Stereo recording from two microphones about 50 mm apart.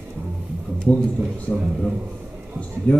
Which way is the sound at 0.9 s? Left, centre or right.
Left.